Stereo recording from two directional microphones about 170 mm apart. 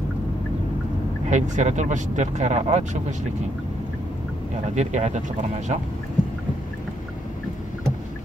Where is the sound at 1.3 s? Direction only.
45° right (ahead or behind).